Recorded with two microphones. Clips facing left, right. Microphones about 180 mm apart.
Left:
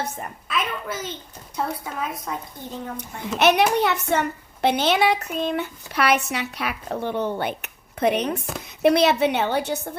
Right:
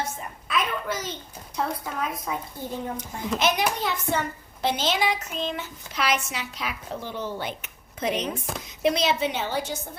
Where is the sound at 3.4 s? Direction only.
65° left (ahead or behind).